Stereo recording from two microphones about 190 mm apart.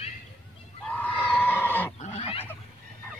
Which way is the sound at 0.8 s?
5° left (ahead or behind).